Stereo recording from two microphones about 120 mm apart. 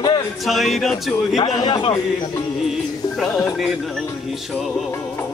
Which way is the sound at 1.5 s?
40° left (ahead or behind).